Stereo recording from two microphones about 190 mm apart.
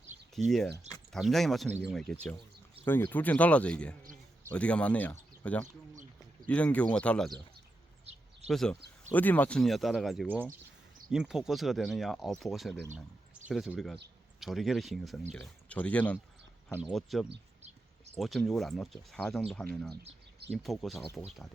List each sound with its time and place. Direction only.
0.4 s speech: centre (ahead or behind)
5.9 s a sound: 40° right (ahead or behind)
6.5 s speech: 5° left (ahead or behind)
8.4 s speech: centre (ahead or behind)